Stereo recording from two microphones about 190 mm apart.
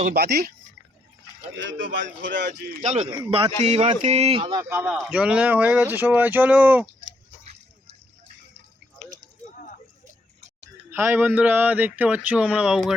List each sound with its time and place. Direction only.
0.1 s speech: 55° right (ahead or behind)
2.2 s speech: 65° right (ahead or behind)
2.8 s a man's voice: 35° right (ahead or behind)
4.7 s speech: 10° right (ahead or behind)
9.4 s a sound: 45° left (ahead or behind)
10.9 s speech: 10° right (ahead or behind)